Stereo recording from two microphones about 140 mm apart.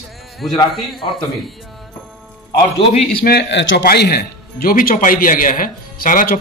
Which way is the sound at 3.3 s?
90° left.